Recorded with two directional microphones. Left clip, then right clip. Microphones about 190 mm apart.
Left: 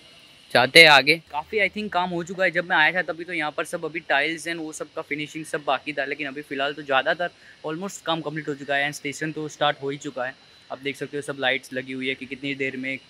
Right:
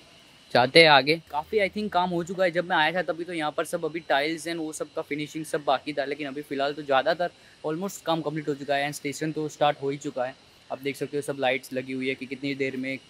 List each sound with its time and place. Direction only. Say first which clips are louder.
0.5 s speech: left 4 dB; centre (ahead or behind)
1.3 s speech: left 2 dB; 15° right (ahead or behind)